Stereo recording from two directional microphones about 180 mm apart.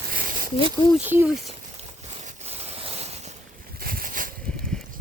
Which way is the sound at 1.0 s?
10° right (ahead or behind).